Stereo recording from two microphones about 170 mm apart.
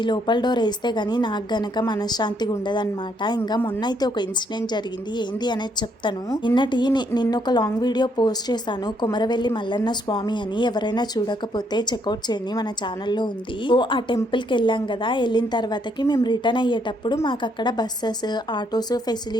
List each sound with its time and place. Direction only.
0.0 s speech: 25° left (ahead or behind)